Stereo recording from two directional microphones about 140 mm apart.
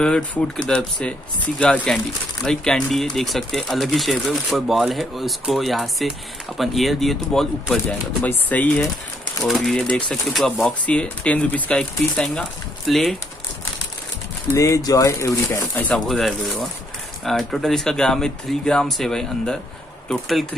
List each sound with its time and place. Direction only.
0.0 s speech: 5° left (ahead or behind)
8.2 s speech: 10° left (ahead or behind)
14.5 s speech: 25° left (ahead or behind)
15.9 s speech: centre (ahead or behind)